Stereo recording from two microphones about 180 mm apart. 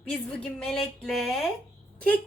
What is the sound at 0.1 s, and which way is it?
A woman's voice, 5° left (ahead or behind).